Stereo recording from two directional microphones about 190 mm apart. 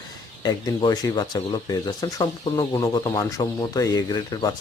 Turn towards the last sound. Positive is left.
turn(degrees=20)  # may be behind; listen again after turning